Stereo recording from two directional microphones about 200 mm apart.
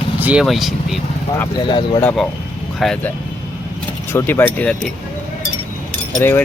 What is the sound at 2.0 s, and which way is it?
Speech, 10° left (ahead or behind).